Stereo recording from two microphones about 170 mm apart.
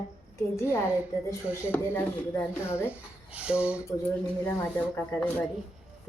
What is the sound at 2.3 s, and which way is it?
Speech, 15° left (ahead or behind).